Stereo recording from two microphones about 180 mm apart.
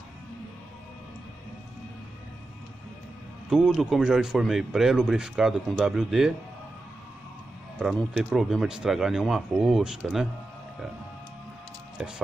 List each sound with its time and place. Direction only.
3.4 s speech: centre (ahead or behind)
7.8 s speech: 5° right (ahead or behind)
12.0 s speech: 5° right (ahead or behind)